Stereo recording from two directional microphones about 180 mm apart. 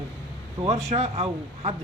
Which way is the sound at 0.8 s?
35° right (ahead or behind).